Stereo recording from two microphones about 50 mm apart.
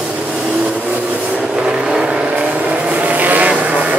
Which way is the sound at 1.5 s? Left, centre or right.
Centre.